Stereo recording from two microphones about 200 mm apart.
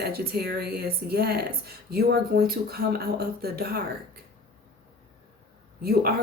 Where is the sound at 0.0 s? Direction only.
50° right (ahead or behind).